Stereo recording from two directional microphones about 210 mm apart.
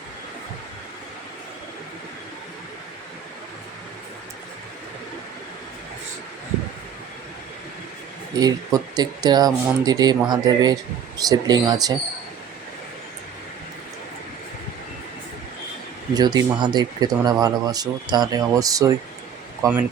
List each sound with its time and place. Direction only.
8.4 s speech: 20° right (ahead or behind)
16.1 s speech: 20° right (ahead or behind)